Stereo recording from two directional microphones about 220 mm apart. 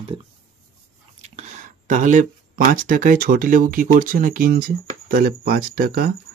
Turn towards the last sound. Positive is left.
turn(degrees=-40)  # may be behind; listen again after turning